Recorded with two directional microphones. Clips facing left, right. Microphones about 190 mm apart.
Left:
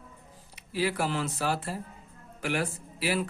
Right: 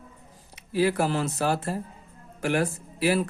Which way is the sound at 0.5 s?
45° right (ahead or behind).